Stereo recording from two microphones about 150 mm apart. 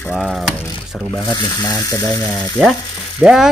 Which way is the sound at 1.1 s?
25° left (ahead or behind).